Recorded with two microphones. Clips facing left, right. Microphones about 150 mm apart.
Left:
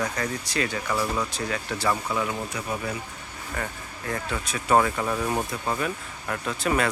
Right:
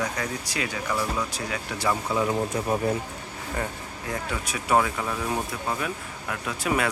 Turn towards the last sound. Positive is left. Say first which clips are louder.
# left 1 dB
turn(degrees=-10)  # may be behind; listen again after turning